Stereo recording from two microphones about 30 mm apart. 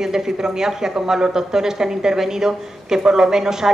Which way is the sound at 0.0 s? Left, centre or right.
Centre.